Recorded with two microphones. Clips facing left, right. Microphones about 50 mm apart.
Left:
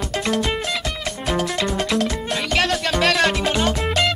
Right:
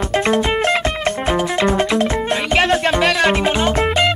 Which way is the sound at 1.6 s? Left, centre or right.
Right.